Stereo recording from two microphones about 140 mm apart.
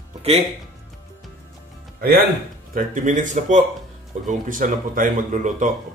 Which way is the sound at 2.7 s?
70° right (ahead or behind).